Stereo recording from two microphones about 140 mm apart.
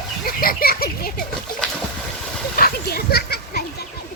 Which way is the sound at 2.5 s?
90° left.